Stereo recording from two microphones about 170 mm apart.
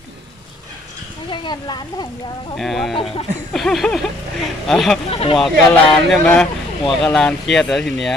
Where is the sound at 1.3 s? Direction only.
25° left (ahead or behind).